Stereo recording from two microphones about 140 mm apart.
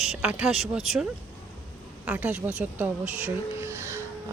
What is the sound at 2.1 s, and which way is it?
Speech, 10° right (ahead or behind).